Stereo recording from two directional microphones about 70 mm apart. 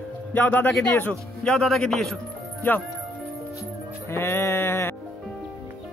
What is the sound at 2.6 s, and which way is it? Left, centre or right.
Speech, left.